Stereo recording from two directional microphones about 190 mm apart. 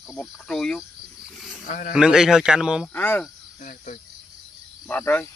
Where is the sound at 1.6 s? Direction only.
45° left (ahead or behind).